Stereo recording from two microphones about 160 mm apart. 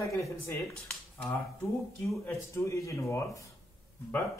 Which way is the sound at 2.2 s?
20° left (ahead or behind).